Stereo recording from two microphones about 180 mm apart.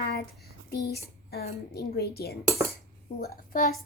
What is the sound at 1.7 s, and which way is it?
Speech, 60° left (ahead or behind).